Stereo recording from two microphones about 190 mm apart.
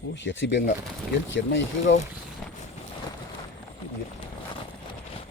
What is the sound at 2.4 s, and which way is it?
Boat, centre (ahead or behind).